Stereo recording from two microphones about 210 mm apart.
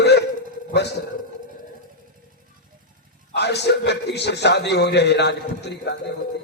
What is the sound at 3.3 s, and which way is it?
A man's voice, 55° left (ahead or behind).